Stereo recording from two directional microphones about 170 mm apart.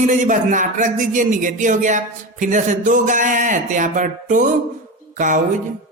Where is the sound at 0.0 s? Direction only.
50° right (ahead or behind).